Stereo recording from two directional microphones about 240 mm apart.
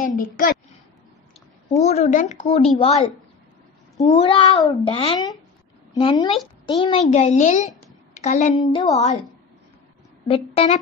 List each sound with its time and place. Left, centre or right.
0.0 s a woman's voice: left
1.8 s speech: left
4.0 s a woman's voice: left
8.6 s a woman's voice: centre
8.9 s speech: left
10.2 s speech: left